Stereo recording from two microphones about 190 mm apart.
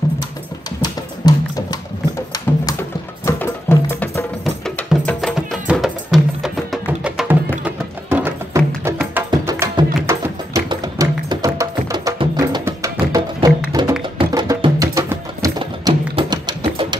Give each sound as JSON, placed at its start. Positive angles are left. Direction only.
{"t": 0.8, "sound": "music", "side_deg": 20}
{"t": 15.6, "sound": "music", "side_deg": -30}